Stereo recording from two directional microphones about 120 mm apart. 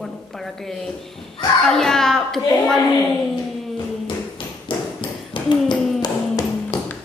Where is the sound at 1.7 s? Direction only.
5° left (ahead or behind).